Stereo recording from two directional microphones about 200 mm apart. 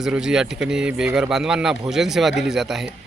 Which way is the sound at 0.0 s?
5° right (ahead or behind).